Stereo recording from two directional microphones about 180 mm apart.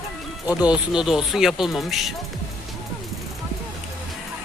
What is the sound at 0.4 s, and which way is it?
Speech, 5° right (ahead or behind).